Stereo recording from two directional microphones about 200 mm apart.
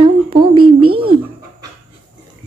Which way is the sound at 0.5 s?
90° right.